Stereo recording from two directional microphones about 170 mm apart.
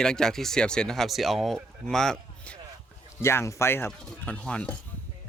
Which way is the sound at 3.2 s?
15° left (ahead or behind).